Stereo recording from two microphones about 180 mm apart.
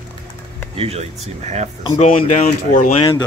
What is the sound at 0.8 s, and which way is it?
Speech, 35° right (ahead or behind).